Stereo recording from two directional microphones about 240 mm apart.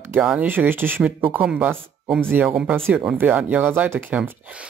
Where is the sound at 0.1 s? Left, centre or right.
Centre.